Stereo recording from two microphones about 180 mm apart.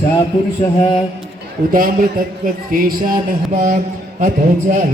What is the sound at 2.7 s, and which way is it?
Speech, 50° right (ahead or behind).